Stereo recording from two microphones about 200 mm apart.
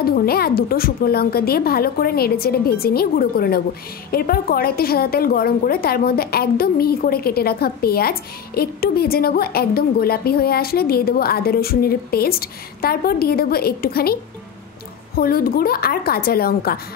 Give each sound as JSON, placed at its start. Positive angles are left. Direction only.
{"t": 0.0, "sound": "a woman's voice", "side_deg": 50}
{"t": 15.1, "sound": "a woman's voice", "side_deg": 50}